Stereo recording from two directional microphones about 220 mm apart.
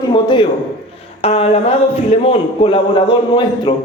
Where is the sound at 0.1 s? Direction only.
20° left (ahead or behind).